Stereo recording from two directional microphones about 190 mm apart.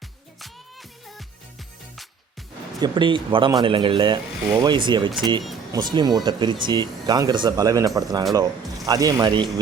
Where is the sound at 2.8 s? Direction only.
25° right (ahead or behind).